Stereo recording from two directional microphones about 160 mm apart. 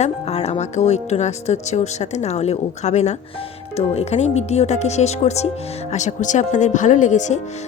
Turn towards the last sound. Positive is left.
turn(degrees=50)  # may be behind; listen again after turning